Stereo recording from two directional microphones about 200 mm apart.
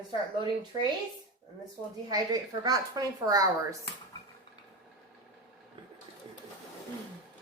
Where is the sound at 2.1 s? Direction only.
20° right (ahead or behind).